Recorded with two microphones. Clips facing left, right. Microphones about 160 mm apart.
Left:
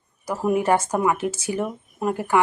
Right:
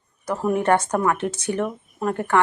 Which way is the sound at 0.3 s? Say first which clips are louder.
Even; 5° left (ahead or behind).